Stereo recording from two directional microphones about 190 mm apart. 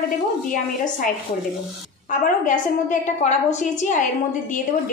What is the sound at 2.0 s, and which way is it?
A woman's voice, 45° left (ahead or behind).